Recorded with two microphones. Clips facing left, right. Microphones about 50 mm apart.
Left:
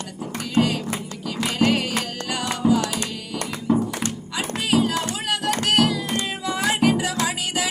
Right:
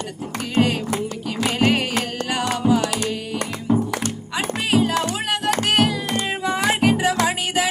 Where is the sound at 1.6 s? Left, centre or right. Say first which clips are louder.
Right 1 dB; right.